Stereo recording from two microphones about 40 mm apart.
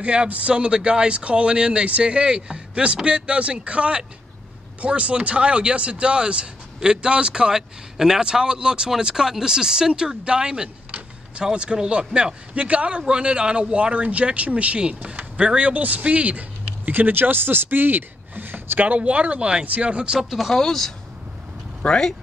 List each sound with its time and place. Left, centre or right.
0.0 s a man's voice: right
18.9 s a man's voice: right
20.2 s speech: centre
20.5 s speech: centre
21.8 s speech: left